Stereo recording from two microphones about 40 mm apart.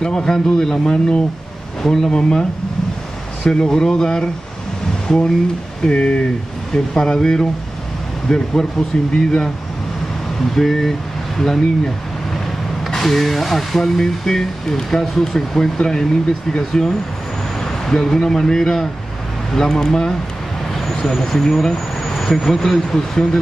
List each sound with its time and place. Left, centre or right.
0.0 s speech: centre
3.4 s speech: centre
5.9 s speech: left
10.5 s speech: centre
12.9 s speech: centre